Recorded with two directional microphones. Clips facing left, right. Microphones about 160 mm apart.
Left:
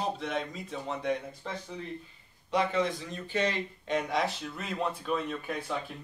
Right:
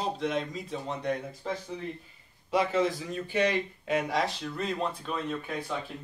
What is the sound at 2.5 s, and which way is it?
Speech, 5° right (ahead or behind).